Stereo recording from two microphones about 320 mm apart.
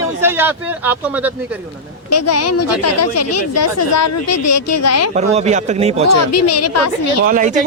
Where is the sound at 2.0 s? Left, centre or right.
Left.